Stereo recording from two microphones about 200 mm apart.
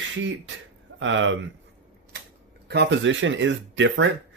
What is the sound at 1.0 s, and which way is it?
Speech, 70° right (ahead or behind).